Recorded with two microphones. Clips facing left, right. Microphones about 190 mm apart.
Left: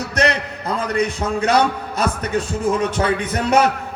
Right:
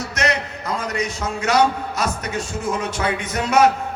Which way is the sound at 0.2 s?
35° left (ahead or behind).